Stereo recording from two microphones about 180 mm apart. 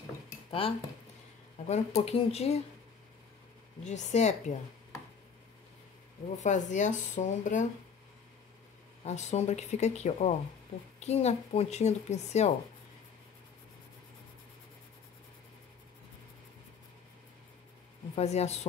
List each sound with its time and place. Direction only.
0.5 s speech: 30° left (ahead or behind)
3.8 s speech: 40° left (ahead or behind)
6.4 s speech: 45° left (ahead or behind)
9.0 s speech: 40° left (ahead or behind)
18.1 s speech: 35° left (ahead or behind)